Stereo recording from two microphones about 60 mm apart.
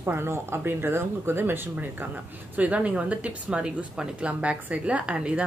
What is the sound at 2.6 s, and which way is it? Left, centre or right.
Speech, right.